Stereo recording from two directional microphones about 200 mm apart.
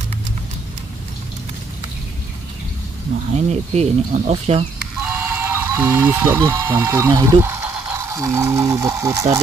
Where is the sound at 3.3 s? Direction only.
35° right (ahead or behind).